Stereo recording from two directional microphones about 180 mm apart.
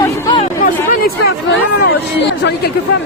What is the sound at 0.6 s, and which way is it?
Speech, 55° left (ahead or behind).